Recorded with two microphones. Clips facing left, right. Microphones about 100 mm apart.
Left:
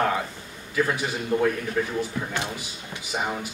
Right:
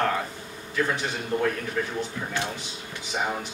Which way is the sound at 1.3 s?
10° left (ahead or behind).